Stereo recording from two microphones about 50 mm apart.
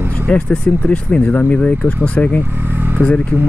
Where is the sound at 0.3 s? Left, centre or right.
Left.